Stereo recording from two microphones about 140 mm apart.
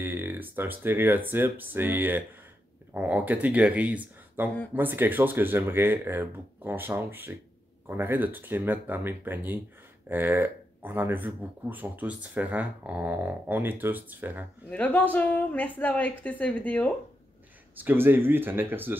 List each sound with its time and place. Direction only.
0.0 s speech: 15° right (ahead or behind)
14.7 s a woman's voice: 10° left (ahead or behind)
17.7 s speech: 15° right (ahead or behind)